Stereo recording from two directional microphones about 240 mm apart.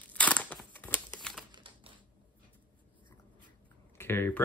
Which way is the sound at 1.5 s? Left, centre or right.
Right.